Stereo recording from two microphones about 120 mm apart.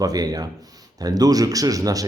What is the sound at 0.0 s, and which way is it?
Speech, 30° right (ahead or behind).